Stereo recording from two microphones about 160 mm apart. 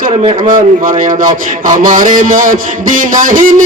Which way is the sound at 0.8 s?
60° right (ahead or behind).